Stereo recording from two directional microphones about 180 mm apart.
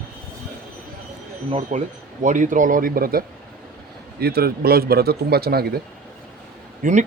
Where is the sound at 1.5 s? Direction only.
40° right (ahead or behind); by 5.8 s 60° right (ahead or behind).